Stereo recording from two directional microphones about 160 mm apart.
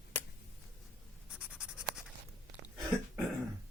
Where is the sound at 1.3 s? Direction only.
5° right (ahead or behind).